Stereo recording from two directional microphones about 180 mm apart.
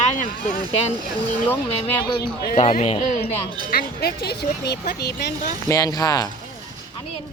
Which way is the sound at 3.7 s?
60° left (ahead or behind).